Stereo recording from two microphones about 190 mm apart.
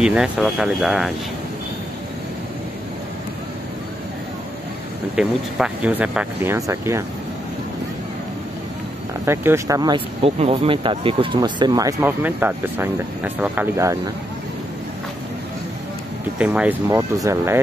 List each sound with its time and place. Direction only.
0.0 s speech: 5° right (ahead or behind)
5.1 s speech: 5° right (ahead or behind)
9.2 s speech: 15° right (ahead or behind)
16.3 s speech: 5° right (ahead or behind)